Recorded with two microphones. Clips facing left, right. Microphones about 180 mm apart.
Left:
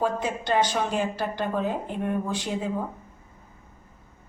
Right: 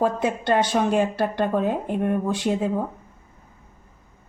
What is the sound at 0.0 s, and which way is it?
Speech, 60° right (ahead or behind).